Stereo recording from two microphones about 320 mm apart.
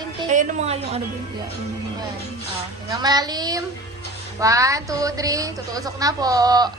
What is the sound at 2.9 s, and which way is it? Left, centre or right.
A woman's voice, centre.